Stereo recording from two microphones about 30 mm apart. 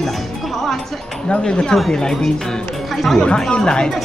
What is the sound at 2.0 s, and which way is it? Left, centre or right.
Speech, left.